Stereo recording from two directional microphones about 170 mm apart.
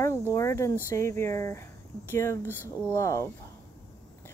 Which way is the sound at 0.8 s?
15° left (ahead or behind).